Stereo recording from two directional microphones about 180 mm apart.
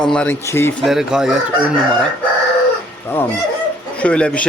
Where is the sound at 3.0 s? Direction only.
10° left (ahead or behind).